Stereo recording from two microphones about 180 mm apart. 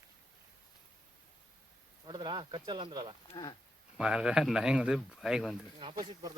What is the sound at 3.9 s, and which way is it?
Speech, 5° right (ahead or behind).